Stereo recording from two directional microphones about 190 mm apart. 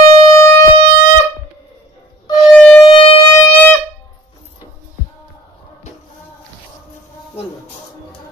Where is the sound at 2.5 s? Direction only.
5° left (ahead or behind).